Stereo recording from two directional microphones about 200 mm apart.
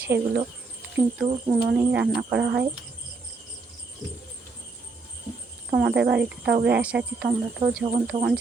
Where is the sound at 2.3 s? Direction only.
60° right (ahead or behind).